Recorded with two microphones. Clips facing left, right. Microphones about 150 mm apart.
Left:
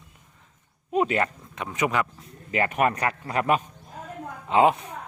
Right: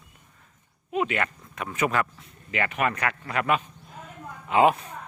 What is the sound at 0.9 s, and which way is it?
Speech, 35° left (ahead or behind).